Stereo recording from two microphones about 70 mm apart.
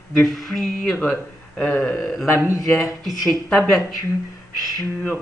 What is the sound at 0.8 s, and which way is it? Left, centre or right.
Speech, centre.